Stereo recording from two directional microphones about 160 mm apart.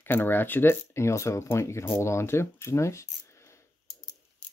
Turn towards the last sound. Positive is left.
turn(degrees=15)  # may be behind; listen again after turning